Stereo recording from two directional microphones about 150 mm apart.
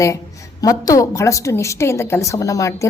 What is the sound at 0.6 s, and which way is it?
A woman's voice, 25° left (ahead or behind).